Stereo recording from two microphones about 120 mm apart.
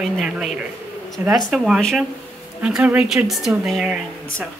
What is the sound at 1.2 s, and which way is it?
Speech, 15° right (ahead or behind).